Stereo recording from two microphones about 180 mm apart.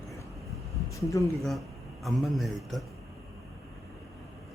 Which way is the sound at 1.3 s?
Centre (ahead or behind).